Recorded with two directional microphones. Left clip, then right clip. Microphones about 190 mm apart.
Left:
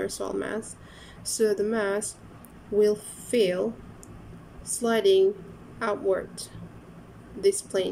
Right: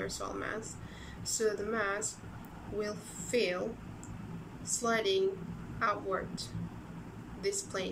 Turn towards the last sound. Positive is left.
turn(degrees=30)  # may be behind; listen again after turning